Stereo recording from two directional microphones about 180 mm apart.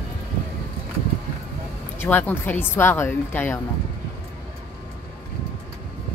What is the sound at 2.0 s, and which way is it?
A woman's voice, 10° left (ahead or behind).